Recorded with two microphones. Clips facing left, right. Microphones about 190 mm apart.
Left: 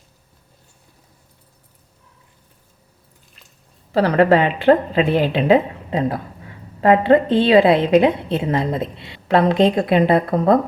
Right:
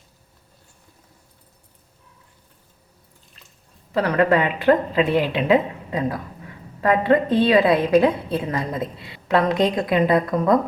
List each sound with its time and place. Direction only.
3.9 s a woman's voice: 30° left (ahead or behind)